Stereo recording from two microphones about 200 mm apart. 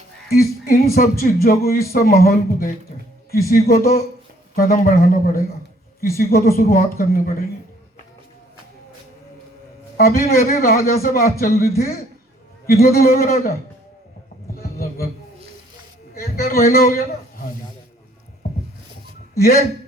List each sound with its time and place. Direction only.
0.3 s speech: 50° left (ahead or behind)
10.0 s speech: 50° left (ahead or behind)
14.5 s a sound: 50° left (ahead or behind)
16.1 s a man's voice: 50° left (ahead or behind)
19.4 s speech: 50° left (ahead or behind)